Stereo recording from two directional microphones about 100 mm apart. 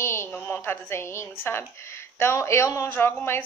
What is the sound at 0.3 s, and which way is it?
A woman's voice, 20° left (ahead or behind).